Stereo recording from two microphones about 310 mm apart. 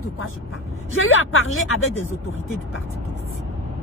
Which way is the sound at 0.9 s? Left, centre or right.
Left.